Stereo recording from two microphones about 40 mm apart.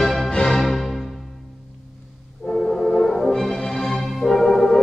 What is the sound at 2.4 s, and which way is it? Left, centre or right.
Music, left.